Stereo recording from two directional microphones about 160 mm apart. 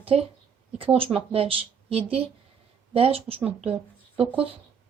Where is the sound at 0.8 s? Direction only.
35° right (ahead or behind).